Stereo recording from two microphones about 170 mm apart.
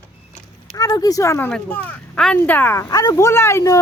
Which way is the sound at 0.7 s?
20° left (ahead or behind).